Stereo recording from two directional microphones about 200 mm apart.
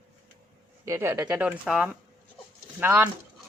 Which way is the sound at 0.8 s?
10° right (ahead or behind).